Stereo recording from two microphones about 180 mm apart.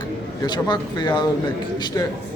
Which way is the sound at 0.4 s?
25° left (ahead or behind).